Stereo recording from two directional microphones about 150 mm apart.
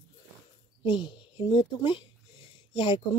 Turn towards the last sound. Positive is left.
turn(degrees=30)  # may be behind; listen again after turning